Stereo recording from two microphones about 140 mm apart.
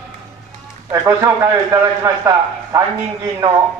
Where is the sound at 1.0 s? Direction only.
20° right (ahead or behind).